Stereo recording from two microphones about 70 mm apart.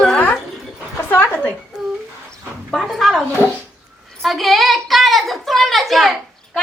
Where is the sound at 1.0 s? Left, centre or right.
Left.